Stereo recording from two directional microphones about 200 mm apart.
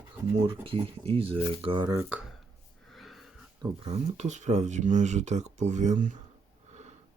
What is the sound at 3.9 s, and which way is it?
Speech, 35° right (ahead or behind).